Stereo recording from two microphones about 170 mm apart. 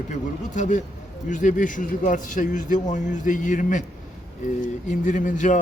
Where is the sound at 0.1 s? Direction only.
45° left (ahead or behind).